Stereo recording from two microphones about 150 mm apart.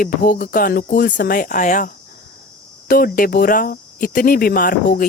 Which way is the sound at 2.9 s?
75° left (ahead or behind).